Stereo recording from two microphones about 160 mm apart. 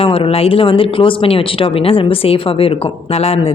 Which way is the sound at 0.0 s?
35° left (ahead or behind).